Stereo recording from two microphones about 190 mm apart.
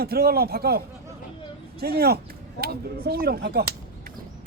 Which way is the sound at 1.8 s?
55° right (ahead or behind).